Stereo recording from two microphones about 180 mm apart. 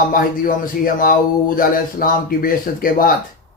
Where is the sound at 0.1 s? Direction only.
50° left (ahead or behind).